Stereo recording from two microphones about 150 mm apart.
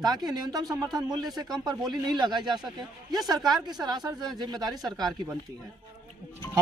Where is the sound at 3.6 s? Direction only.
25° right (ahead or behind).